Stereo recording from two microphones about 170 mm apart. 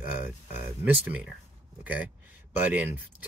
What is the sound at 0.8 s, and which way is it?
Speech, 10° right (ahead or behind).